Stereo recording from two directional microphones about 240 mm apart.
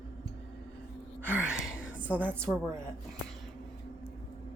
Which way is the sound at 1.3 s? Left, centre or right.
Centre.